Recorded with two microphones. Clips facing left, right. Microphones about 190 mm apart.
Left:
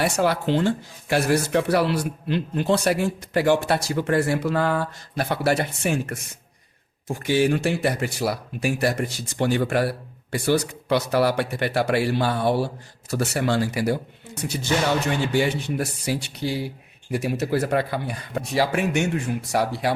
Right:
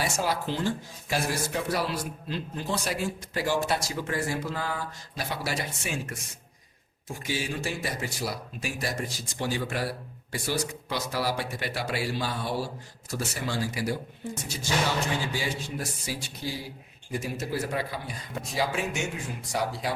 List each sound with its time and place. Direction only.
0.0 s speech: 65° left (ahead or behind)